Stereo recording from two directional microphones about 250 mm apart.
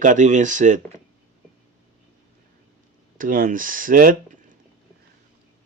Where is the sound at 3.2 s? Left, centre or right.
Right.